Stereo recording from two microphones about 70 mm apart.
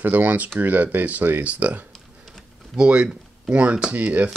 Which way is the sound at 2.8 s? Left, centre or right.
Centre.